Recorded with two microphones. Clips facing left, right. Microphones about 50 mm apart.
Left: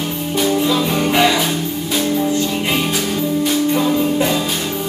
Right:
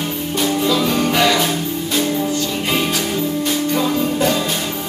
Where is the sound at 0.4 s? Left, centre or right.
Centre.